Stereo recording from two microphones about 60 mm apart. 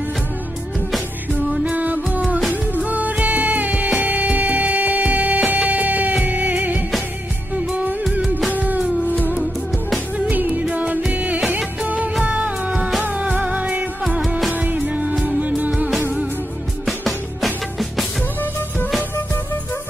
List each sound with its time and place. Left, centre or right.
1.6 s music: right
10.3 s music: right
16.8 s music: centre